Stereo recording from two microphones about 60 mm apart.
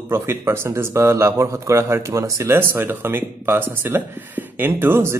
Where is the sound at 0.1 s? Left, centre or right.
Right.